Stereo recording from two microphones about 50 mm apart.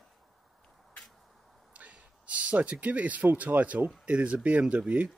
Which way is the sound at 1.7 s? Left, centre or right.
Right.